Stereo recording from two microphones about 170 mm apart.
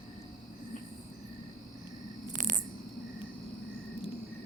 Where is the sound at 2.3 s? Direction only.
50° right (ahead or behind).